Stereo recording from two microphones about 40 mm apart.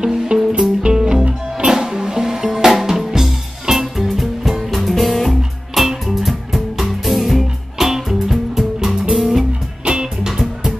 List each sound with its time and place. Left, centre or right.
0.0 s music: centre
9.8 s music: right
10.3 s music: centre